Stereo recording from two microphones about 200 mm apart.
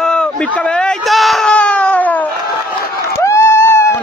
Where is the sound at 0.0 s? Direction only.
5° left (ahead or behind).